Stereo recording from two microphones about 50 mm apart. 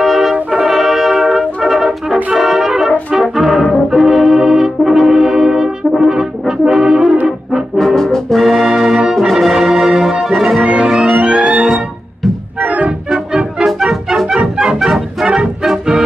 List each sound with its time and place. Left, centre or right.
0.0 s brass instrument: centre
7.7 s brass instrument: centre
8.5 s music: centre
10.2 s brass instrument: centre
10.6 s music: centre
12.5 s organ: right
14.1 s music: centre
14.8 s brass instrument: centre
15.2 s music: centre